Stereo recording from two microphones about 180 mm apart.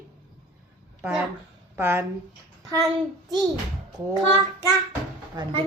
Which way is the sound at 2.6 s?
20° right (ahead or behind).